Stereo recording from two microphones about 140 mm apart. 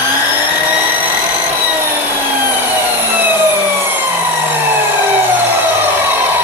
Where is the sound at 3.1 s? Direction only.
15° right (ahead or behind).